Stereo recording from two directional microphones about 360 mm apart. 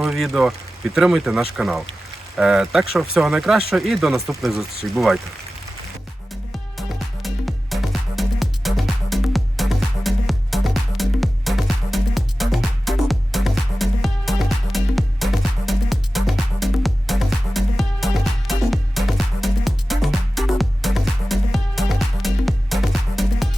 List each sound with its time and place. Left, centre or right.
0.0 s speech: centre
6.7 s music: centre